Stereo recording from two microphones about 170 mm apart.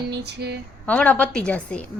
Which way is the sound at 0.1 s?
75° right (ahead or behind).